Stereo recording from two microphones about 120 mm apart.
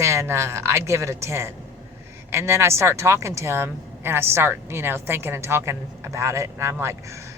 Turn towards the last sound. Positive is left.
turn(degrees=-25)  # may be behind; listen again after turning